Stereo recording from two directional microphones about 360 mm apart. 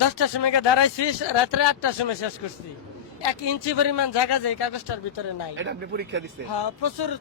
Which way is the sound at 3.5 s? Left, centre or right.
Left.